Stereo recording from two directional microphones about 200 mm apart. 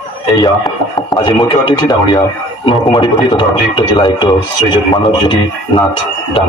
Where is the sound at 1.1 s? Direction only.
25° left (ahead or behind).